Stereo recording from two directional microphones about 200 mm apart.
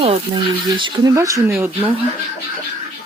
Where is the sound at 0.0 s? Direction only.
25° right (ahead or behind).